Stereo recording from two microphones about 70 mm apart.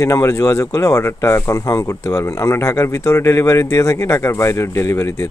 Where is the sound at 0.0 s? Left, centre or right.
Left.